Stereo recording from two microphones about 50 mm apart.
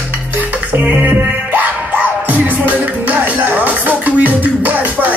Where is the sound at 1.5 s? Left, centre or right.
Right.